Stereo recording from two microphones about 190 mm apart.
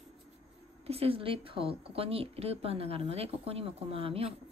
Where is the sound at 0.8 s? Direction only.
30° right (ahead or behind).